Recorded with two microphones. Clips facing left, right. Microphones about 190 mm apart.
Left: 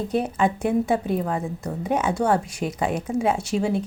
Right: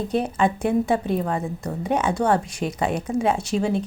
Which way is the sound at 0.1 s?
5° left (ahead or behind).